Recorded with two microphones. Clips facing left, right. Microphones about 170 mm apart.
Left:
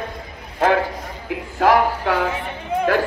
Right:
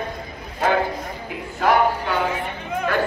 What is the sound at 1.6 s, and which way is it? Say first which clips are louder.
Speech: left 2 dB; 90° left.